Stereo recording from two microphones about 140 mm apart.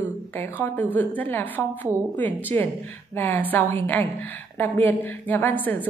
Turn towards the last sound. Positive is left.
turn(degrees=10)  # may be behind; listen again after turning